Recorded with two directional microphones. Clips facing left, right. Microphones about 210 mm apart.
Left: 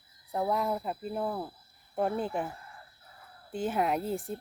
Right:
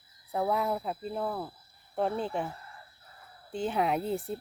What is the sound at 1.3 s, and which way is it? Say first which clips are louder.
Speech: even; 20° left (ahead or behind).